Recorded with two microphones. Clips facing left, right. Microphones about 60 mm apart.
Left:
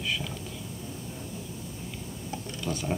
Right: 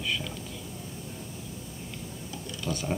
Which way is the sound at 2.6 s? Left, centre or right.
Centre.